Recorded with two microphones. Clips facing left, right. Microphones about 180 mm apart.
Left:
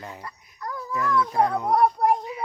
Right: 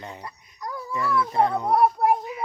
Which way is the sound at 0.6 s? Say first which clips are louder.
Even; 10° right (ahead or behind).